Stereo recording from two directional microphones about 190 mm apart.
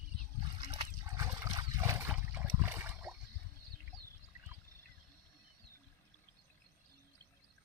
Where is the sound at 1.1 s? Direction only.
15° right (ahead or behind).